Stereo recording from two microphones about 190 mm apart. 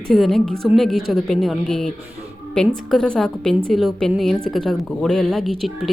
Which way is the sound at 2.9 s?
5° left (ahead or behind).